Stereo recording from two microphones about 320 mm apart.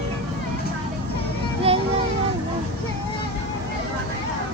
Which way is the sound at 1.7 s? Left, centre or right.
Centre.